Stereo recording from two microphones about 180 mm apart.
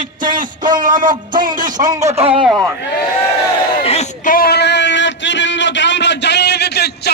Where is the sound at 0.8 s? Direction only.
45° right (ahead or behind).